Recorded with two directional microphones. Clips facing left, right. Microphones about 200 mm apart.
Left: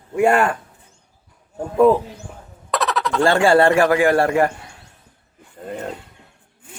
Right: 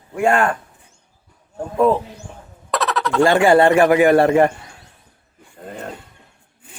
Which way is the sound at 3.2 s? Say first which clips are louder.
Right 1 dB; 20° right (ahead or behind).